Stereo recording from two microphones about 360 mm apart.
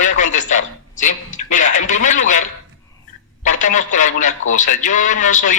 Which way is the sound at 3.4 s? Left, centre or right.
Left.